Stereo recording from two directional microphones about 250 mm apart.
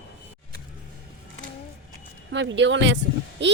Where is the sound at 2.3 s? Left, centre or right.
Right.